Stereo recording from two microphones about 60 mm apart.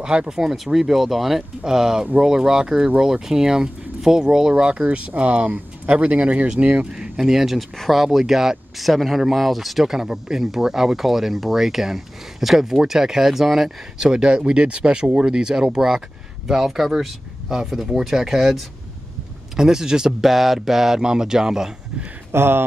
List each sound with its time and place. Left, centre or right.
0.0 s speech: centre
6.9 s speech: centre
22.3 s speech: right